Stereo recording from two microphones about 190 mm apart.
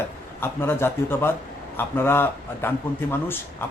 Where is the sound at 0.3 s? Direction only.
10° left (ahead or behind).